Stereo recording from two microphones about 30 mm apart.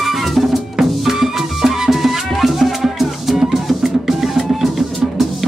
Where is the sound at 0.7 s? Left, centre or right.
Centre.